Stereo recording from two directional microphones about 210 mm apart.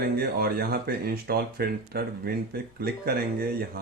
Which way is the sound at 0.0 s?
45° right (ahead or behind).